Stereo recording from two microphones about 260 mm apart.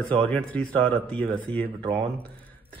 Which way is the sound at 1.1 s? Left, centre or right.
Centre.